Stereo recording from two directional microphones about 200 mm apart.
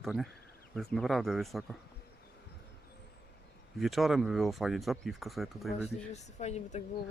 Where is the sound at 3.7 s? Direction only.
Centre (ahead or behind).